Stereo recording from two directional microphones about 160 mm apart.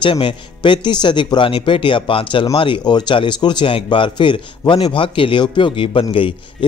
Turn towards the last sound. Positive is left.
turn(degrees=35)  # may be behind; listen again after turning